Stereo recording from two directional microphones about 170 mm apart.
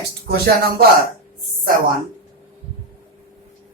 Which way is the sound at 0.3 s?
65° right (ahead or behind).